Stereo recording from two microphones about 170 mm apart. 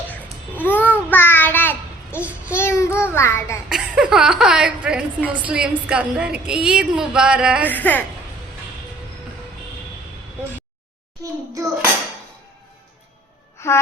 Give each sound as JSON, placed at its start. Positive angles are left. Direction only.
{"t": 0.1, "sound": "babbling", "side_deg": 10}
{"t": 1.1, "sound": "child singing", "side_deg": 10}
{"t": 3.7, "sound": "a woman's voice", "side_deg": -5}
{"t": 7.7, "sound": "child singing", "side_deg": 10}
{"t": 11.2, "sound": "hands", "side_deg": -20}